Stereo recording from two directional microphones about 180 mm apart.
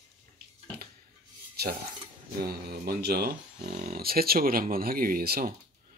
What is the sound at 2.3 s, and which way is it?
Speech, 55° right (ahead or behind).